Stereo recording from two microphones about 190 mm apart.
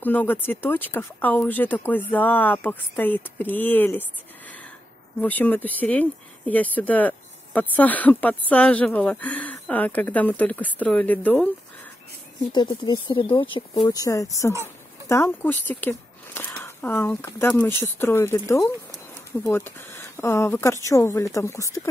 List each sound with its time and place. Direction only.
0.0 s speech: 10° left (ahead or behind)
5.2 s speech: 10° left (ahead or behind)
12.5 s speech: 25° left (ahead or behind)